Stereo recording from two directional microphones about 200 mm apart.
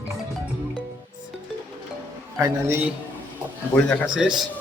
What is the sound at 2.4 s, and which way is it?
Speech, 15° right (ahead or behind).